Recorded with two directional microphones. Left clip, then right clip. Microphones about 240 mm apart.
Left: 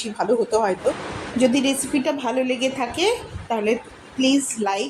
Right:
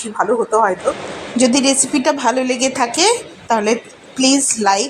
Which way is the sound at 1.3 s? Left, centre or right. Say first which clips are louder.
Right 5 dB; centre.